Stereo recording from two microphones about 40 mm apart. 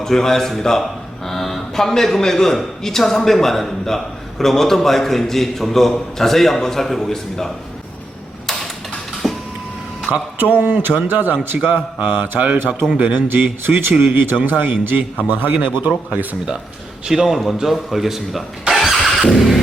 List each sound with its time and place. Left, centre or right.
0.0 s a man's voice: centre
9.2 s printer: centre
10.3 s a man's voice: right
13.1 s a man's voice: right
17.1 s a man's voice: centre
18.8 s vehicle: centre